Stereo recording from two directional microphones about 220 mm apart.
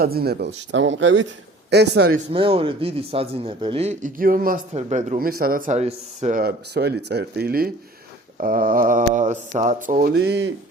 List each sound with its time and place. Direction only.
0.0 s speech: 45° right (ahead or behind)
2.3 s a man's voice: 25° right (ahead or behind); by 10.5 s 50° right (ahead or behind)